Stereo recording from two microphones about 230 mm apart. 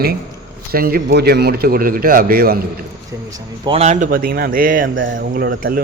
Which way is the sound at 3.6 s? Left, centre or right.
Right.